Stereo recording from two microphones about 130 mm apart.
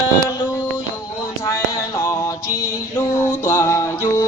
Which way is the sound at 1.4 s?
25° left (ahead or behind).